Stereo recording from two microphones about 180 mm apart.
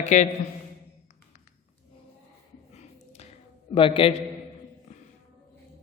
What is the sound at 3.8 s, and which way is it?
Speech, 30° left (ahead or behind).